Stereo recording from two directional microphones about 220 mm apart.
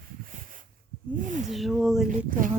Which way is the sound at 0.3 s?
35° right (ahead or behind).